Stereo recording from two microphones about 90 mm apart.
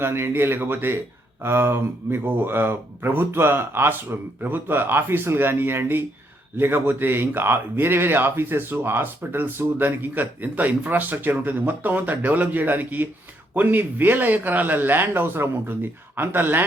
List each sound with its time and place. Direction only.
0.0 s speech: 25° right (ahead or behind)